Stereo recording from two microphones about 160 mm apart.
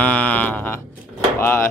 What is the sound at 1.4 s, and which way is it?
Speech, 15° left (ahead or behind).